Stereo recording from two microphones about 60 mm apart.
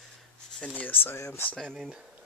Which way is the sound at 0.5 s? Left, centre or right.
Left.